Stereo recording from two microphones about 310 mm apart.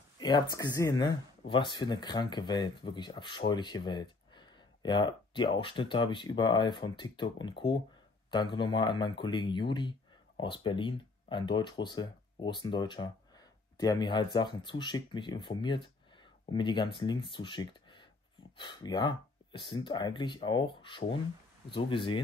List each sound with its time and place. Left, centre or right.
0.2 s speech: centre